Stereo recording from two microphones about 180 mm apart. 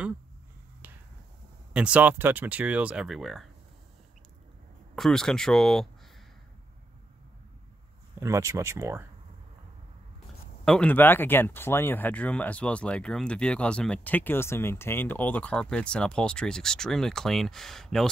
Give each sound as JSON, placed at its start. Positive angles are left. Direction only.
{"t": 0.8, "sound": "finger snapping", "side_deg": -10}
{"t": 1.7, "sound": "speech", "side_deg": -5}
{"t": 4.9, "sound": "speech", "side_deg": 0}
{"t": 8.2, "sound": "speech", "side_deg": -15}
{"t": 10.6, "sound": "speech", "side_deg": 5}